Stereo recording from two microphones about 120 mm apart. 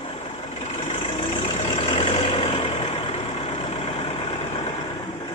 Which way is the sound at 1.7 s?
55° left (ahead or behind).